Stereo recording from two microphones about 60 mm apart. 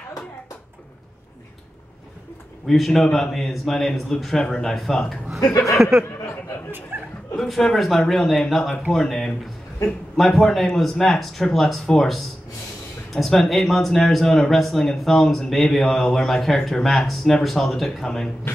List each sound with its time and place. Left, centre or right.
2.6 s speech: centre
5.4 s speech: left
5.8 s speech: centre
6.9 s chuckle: right
7.3 s speech: centre